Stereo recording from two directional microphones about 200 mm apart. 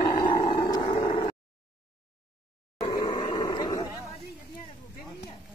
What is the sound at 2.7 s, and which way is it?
Grunt, 20° left (ahead or behind).